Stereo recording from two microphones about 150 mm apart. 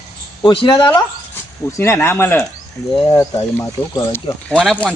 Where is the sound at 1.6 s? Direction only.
15° left (ahead or behind).